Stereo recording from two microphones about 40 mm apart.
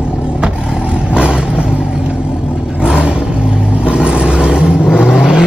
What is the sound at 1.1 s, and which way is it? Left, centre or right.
Vehicle, right.